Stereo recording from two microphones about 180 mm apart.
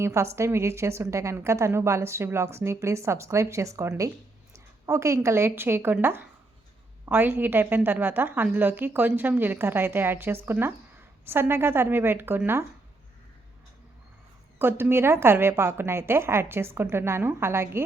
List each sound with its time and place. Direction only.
0.0 s a woman's voice: 15° right (ahead or behind)
14.6 s a woman's voice: 10° right (ahead or behind)